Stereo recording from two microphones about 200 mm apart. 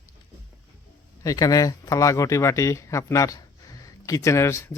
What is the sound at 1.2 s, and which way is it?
Speech, 15° left (ahead or behind).